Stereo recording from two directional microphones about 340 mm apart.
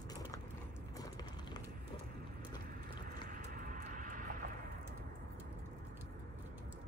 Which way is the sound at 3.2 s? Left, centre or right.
Right.